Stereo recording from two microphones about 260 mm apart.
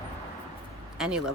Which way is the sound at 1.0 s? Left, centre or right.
Centre.